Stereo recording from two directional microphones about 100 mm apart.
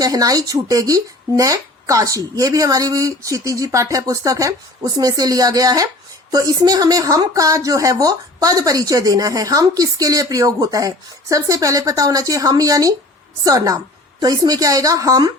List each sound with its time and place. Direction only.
0.0 s a woman's voice: 35° right (ahead or behind)